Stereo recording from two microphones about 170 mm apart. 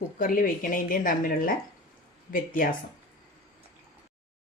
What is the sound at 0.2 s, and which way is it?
Speech, 55° left (ahead or behind).